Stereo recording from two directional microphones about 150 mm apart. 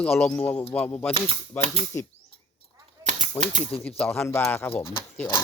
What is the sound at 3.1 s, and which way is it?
Typewriter, 55° right (ahead or behind).